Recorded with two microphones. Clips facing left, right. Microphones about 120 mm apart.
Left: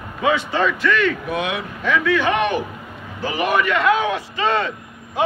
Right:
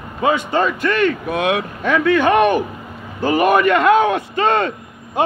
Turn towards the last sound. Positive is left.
turn(degrees=-50)  # may be behind; listen again after turning